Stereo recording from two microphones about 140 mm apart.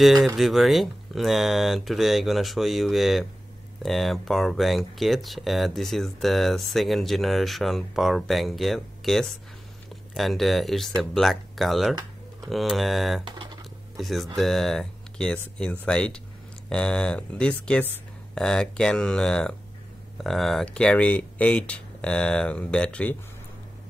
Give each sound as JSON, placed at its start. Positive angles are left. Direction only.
{"t": 0.0, "sound": "speech", "side_deg": 0}
{"t": 13.2, "sound": "speech", "side_deg": -35}
{"t": 13.9, "sound": "speech", "side_deg": 0}